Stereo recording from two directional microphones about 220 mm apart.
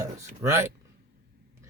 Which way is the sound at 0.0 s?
10° right (ahead or behind).